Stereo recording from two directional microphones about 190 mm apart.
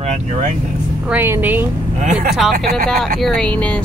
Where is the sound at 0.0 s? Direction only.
35° right (ahead or behind).